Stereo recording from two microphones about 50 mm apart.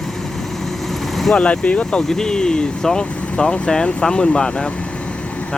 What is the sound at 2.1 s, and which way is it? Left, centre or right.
Speech, centre.